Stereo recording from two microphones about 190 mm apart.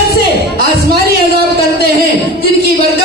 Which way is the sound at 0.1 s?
55° right (ahead or behind).